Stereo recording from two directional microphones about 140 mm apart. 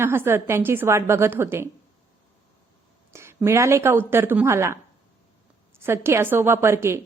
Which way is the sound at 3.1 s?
20° right (ahead or behind).